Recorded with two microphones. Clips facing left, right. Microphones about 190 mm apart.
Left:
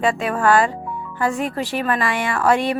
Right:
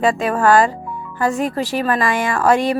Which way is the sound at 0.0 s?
40° right (ahead or behind).